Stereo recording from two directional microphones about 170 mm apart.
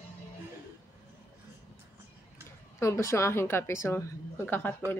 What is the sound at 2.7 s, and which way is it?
A woman's voice, 15° left (ahead or behind).